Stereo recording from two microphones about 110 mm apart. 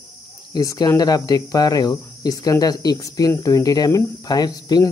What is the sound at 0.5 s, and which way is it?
Speech, 35° left (ahead or behind).